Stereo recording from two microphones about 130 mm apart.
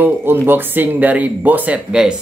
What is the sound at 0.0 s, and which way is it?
Speech, 15° right (ahead or behind).